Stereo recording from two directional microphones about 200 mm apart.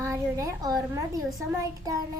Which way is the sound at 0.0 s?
15° right (ahead or behind).